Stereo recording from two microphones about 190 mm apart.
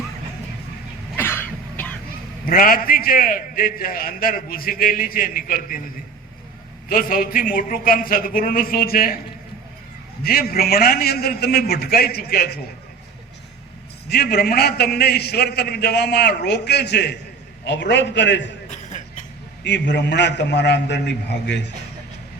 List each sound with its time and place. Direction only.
1.1 s cough: 10° left (ahead or behind)
2.4 s a man's voice: 50° left (ahead or behind)
6.8 s a man's voice: 50° left (ahead or behind)
10.2 s a man's voice: 50° left (ahead or behind)
14.1 s a man's voice: 55° left (ahead or behind)
18.7 s a sound: 40° left (ahead or behind)
19.6 s a man's voice: 65° left (ahead or behind)